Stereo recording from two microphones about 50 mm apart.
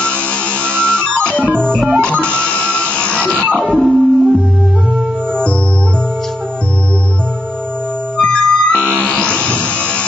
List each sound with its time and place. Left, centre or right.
0.0 s music: left
1.5 s organ: centre
2.0 s music: left
3.6 s music: centre
8.2 s music: left